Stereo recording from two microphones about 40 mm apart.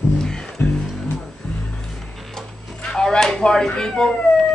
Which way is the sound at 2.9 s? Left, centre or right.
Centre.